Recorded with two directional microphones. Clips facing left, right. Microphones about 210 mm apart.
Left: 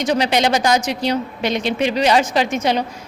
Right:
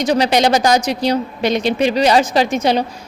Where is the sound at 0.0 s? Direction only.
35° right (ahead or behind).